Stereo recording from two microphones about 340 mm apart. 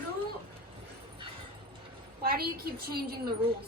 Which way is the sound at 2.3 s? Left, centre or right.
Right.